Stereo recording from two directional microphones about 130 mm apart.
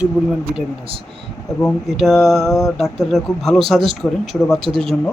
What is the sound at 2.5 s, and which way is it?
Mantra, 25° left (ahead or behind).